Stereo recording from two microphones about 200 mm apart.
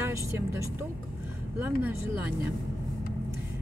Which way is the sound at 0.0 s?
15° right (ahead or behind).